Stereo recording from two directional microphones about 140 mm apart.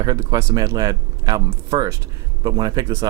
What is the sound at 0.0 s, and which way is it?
Speech, 30° right (ahead or behind).